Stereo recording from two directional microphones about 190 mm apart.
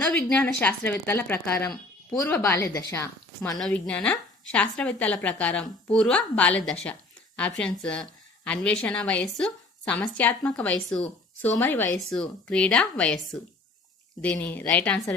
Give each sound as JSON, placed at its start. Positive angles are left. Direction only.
{"t": 0.3, "sound": "a woman's voice", "side_deg": 10}